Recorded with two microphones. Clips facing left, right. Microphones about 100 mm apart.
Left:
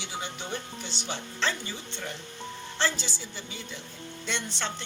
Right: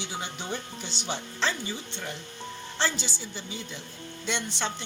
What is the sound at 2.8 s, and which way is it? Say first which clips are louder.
Speech: even; 15° right (ahead or behind).